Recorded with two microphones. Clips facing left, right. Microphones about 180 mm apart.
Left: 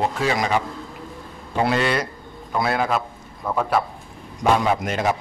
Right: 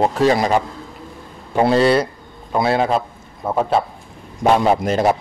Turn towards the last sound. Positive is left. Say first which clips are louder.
# right 6 dB
turn(degrees=-35)  # may be behind; listen again after turning